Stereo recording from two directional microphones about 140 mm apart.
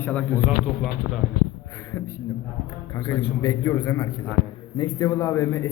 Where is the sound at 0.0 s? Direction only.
10° left (ahead or behind).